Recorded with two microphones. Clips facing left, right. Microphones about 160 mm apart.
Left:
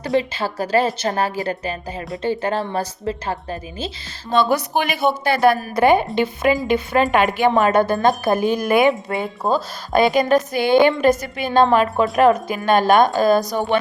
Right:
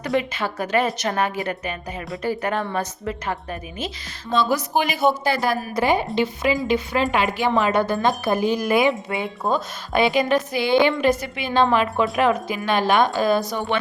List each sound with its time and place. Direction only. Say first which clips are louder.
0.0 s a woman's voice: left 3 dB; 30° left (ahead or behind)
4.3 s a woman's voice: left 3 dB; 60° left (ahead or behind)
9.1 s a woman's voice: left 3 dB; 45° left (ahead or behind)